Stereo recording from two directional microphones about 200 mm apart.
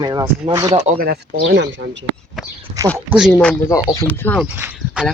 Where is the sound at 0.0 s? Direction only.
20° right (ahead or behind).